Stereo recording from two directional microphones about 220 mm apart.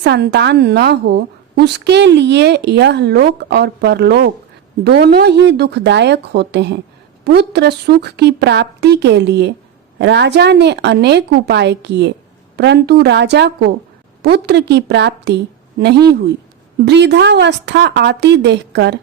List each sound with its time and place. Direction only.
0.0 s speech: 50° right (ahead or behind)